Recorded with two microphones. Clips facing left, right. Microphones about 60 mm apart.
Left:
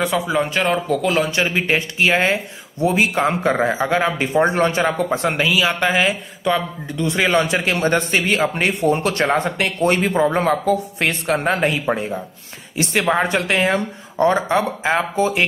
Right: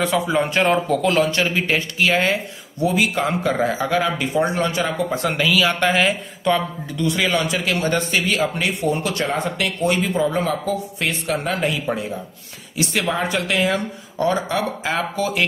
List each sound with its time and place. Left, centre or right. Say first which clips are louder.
0.0 s speech: even; centre
1.1 s speech: even; centre
5.9 s speech: even; centre
7.0 s speech: left 3 dB; left